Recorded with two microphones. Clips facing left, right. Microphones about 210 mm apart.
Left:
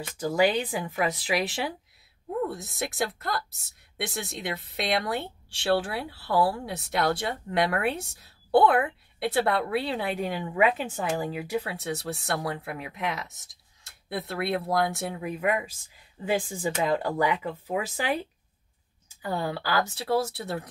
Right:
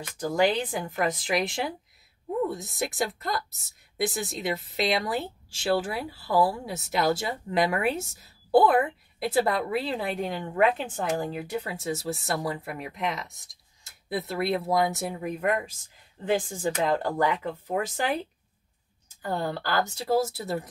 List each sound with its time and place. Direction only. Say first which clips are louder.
0.2 s a woman's voice: even; 5° left (ahead or behind)
19.2 s a woman's voice: even; 5° left (ahead or behind)